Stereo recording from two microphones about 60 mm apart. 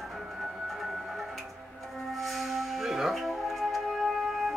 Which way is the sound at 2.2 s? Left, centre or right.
Centre.